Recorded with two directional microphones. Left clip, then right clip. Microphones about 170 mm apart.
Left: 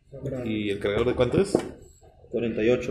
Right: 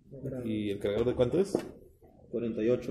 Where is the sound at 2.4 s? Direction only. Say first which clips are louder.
Left 6 dB; 50° right (ahead or behind).